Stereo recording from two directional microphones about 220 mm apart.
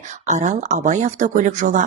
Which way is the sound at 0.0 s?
35° right (ahead or behind).